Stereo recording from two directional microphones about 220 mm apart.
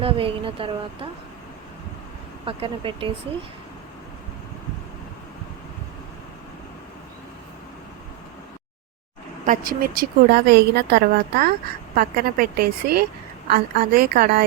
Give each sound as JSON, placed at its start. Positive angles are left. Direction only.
{"t": 0.0, "sound": "speech", "side_deg": -25}
{"t": 2.4, "sound": "speech", "side_deg": -25}
{"t": 9.5, "sound": "a woman's voice", "side_deg": -40}